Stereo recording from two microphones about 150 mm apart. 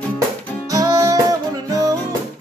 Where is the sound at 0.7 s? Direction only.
20° right (ahead or behind).